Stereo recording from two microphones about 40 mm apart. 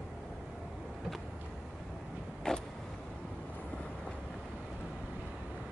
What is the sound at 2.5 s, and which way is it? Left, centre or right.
Vehicle, centre.